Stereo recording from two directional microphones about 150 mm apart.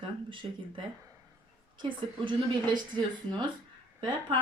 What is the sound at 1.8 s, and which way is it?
A woman's voice, 30° right (ahead or behind).